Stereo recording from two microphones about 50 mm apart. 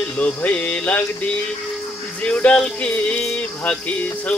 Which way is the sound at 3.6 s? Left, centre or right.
Left.